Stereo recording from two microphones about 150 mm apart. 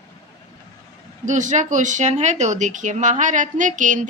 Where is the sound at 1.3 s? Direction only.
55° right (ahead or behind).